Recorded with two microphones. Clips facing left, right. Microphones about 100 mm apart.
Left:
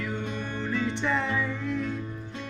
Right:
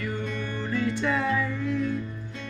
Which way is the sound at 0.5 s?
20° left (ahead or behind).